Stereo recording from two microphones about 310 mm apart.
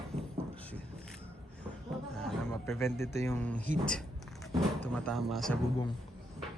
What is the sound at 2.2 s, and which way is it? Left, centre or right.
A man's voice, centre.